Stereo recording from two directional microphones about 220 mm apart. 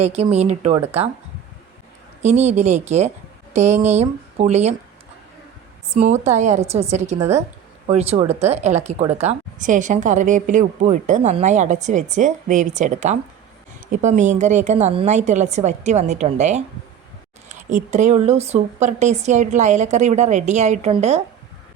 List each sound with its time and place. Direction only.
0.2 s speech: 30° right (ahead or behind)
2.2 s a woman's voice: 30° right (ahead or behind)
5.9 s a woman's voice: 30° right (ahead or behind)